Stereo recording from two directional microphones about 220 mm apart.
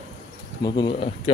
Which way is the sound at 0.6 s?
20° left (ahead or behind).